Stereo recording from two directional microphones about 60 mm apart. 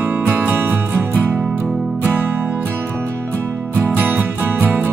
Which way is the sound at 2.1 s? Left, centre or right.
Right.